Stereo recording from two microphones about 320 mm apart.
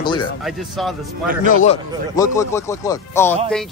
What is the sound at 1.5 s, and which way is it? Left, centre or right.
Speech, left.